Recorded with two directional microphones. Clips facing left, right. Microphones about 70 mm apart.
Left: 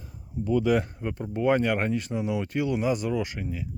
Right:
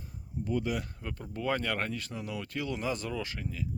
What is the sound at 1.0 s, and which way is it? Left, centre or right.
Speech, left.